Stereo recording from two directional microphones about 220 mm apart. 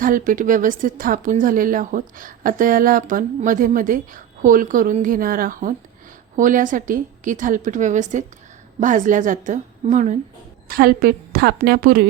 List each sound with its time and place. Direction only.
0.0 s a woman's voice: 40° right (ahead or behind)